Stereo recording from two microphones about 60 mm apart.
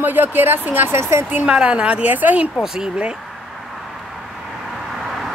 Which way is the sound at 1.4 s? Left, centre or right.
Centre.